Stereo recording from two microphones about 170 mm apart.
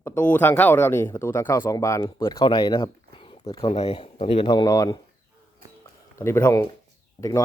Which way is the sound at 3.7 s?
35° left (ahead or behind).